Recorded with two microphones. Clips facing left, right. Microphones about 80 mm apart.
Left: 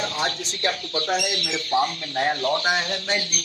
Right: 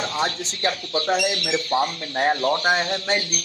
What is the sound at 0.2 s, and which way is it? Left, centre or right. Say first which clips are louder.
Speech: right 2 dB; right.